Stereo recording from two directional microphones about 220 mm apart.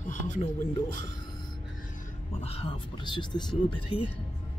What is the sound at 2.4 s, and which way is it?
Speech, 25° left (ahead or behind).